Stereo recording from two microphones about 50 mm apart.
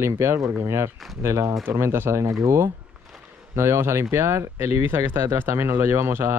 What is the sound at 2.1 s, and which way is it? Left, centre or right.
Speech, right.